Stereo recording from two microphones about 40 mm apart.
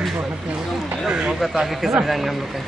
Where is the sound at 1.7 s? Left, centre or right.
Centre.